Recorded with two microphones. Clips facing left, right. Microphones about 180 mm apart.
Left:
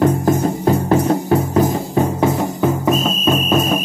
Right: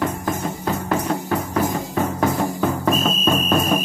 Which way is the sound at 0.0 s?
30° left (ahead or behind).